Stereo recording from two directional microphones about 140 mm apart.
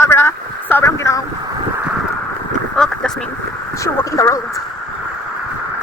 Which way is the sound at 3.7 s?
20° left (ahead or behind).